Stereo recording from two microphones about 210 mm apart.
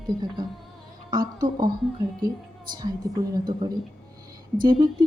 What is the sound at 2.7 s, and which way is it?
A woman's voice, 20° right (ahead or behind).